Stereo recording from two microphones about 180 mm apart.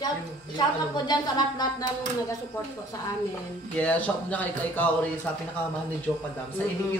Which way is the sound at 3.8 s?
10° left (ahead or behind).